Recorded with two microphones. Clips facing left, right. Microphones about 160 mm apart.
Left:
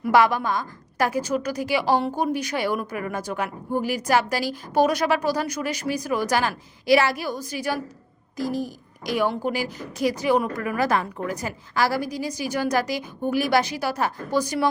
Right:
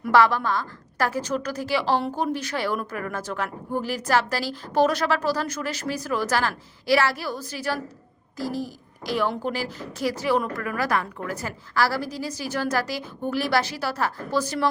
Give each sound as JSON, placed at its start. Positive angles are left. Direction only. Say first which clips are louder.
{"t": 0.1, "sound": "a woman's voice", "louder": "even", "side_deg": 15}